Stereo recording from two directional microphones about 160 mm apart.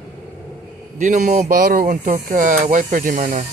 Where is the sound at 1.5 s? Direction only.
60° right (ahead or behind).